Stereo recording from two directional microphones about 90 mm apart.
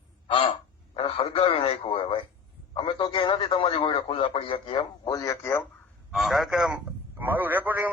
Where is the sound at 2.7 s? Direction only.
65° left (ahead or behind); by 4.8 s 85° left.